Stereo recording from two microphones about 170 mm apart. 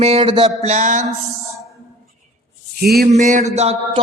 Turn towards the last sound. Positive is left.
turn(degrees=-40)  # may be behind; listen again after turning